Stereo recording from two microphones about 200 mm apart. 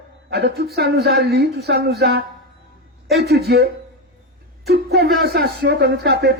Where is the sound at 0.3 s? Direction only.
55° right (ahead or behind).